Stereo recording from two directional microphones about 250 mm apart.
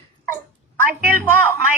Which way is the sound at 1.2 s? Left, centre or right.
Centre.